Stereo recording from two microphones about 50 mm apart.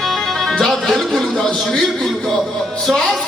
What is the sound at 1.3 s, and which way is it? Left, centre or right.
A man's voice, centre.